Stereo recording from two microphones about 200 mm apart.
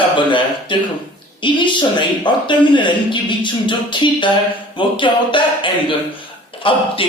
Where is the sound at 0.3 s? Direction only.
25° left (ahead or behind).